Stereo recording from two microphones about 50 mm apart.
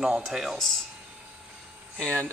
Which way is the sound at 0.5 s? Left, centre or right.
Centre.